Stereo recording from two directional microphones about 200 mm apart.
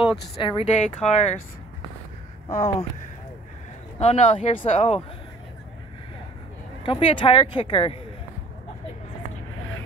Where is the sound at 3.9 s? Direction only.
35° left (ahead or behind).